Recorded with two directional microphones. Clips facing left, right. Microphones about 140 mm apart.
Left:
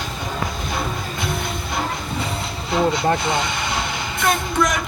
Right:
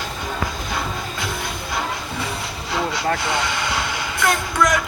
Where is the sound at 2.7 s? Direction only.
25° left (ahead or behind).